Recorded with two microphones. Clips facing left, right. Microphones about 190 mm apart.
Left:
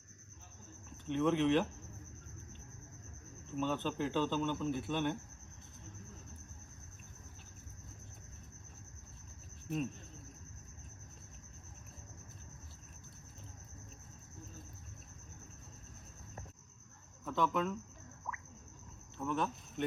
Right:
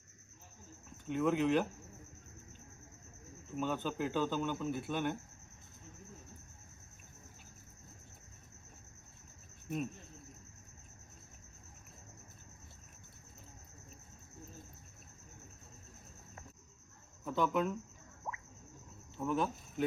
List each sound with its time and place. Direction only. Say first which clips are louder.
1.0 s speech: left 1 dB; 5° right (ahead or behind)
3.5 s speech: left 1 dB; 5° right (ahead or behind)
17.2 s speech: right 1 dB; 5° right (ahead or behind)
18.3 s a sound: right 2 dB; 25° right (ahead or behind)
19.1 s speech: right 2 dB; 5° right (ahead or behind)